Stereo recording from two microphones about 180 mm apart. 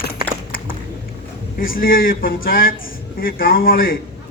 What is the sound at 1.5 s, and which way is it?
A man's voice, 55° left (ahead or behind).